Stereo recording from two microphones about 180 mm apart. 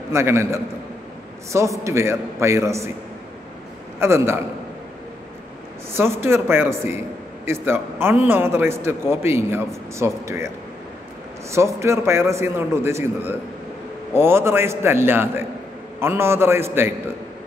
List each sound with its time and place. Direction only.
0.1 s a man's voice: 15° right (ahead or behind)
4.0 s a man's voice: 15° right (ahead or behind)
5.9 s a man's voice: 15° right (ahead or behind)
11.5 s a man's voice: 15° right (ahead or behind)